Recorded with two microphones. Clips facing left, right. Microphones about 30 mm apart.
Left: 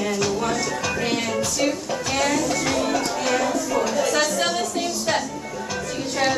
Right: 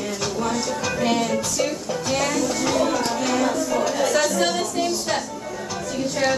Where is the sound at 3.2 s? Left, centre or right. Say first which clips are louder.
Even; centre.